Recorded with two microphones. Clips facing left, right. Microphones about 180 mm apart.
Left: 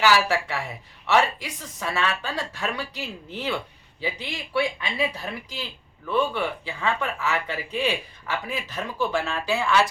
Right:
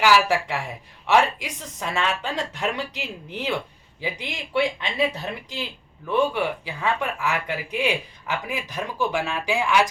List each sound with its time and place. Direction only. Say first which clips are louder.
0.0 s speech: right 2 dB; 15° right (ahead or behind)